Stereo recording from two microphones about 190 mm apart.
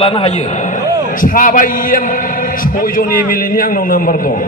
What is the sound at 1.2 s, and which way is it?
Speech, 45° left (ahead or behind).